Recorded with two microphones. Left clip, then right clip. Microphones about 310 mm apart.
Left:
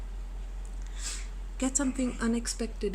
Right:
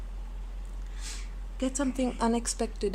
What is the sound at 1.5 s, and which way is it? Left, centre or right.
A woman's voice, centre.